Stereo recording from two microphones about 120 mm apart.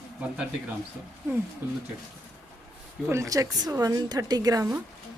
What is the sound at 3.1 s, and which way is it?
A woman's voice, 25° right (ahead or behind).